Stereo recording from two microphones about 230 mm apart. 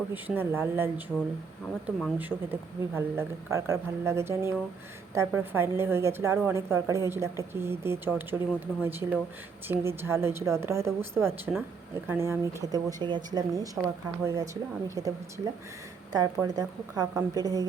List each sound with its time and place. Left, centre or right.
0.1 s a woman's voice: centre
16.1 s a woman's voice: centre